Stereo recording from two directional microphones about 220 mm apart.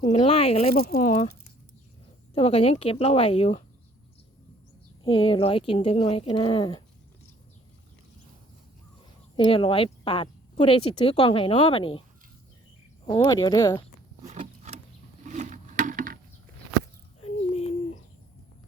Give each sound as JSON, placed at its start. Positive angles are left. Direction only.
{"t": 0.0, "sound": "speech", "side_deg": 25}
{"t": 2.3, "sound": "speech", "side_deg": 25}
{"t": 5.0, "sound": "speech", "side_deg": 25}
{"t": 9.3, "sound": "speech", "side_deg": 25}
{"t": 13.1, "sound": "speech", "side_deg": 20}
{"t": 14.3, "sound": "a sound", "side_deg": -30}
{"t": 17.2, "sound": "a sound", "side_deg": 25}